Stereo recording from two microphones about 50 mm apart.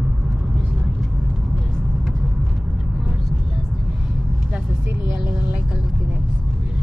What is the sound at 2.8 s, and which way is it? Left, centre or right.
Vehicle, centre.